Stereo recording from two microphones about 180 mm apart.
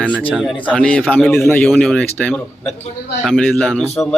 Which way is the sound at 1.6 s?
5° left (ahead or behind).